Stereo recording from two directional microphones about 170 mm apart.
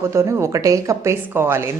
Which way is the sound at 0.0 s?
15° right (ahead or behind).